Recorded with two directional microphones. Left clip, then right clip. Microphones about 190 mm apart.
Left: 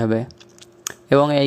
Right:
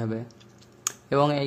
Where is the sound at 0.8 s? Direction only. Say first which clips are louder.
Left 7 dB; 35° left (ahead or behind).